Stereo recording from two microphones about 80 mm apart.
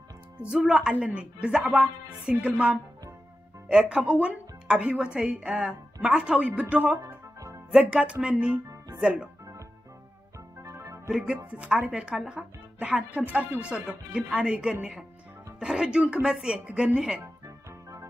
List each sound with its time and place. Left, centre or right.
0.4 s a woman's voice: centre
10.6 s music: right
11.1 s a woman's voice: centre